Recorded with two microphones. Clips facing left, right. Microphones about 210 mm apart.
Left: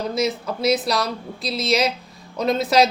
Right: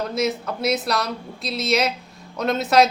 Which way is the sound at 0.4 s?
30° left (ahead or behind).